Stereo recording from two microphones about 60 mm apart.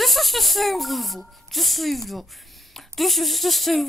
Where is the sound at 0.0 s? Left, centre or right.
Centre.